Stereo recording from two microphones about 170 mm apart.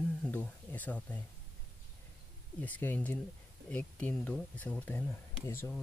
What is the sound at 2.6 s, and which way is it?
Speech, 10° left (ahead or behind).